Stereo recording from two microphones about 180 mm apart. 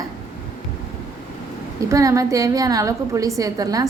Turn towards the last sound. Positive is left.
turn(degrees=-20)  # may be behind; listen again after turning